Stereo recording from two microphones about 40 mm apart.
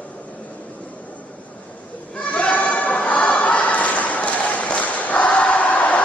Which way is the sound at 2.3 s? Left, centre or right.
Left.